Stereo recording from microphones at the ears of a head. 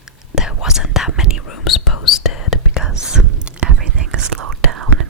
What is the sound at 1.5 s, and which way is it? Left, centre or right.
Whispering, left.